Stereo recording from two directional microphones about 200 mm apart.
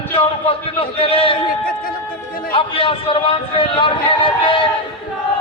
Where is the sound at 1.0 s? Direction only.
30° left (ahead or behind).